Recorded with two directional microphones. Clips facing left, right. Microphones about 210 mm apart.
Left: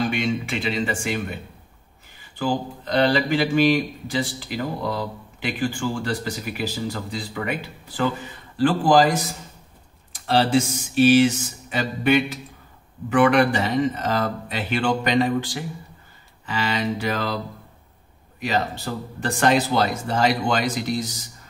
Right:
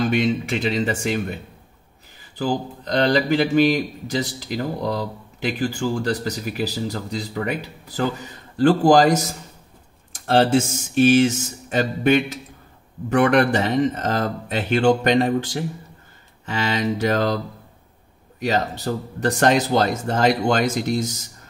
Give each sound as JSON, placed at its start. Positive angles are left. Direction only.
{"t": 0.0, "sound": "speech", "side_deg": -40}
{"t": 2.3, "sound": "speech", "side_deg": -40}
{"t": 18.9, "sound": "speech", "side_deg": -40}